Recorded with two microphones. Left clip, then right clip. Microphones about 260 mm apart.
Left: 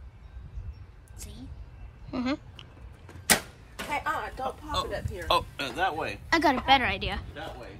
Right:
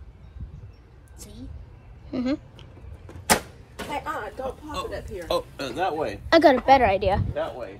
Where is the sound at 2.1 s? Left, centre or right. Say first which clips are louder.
Right 4 dB; centre.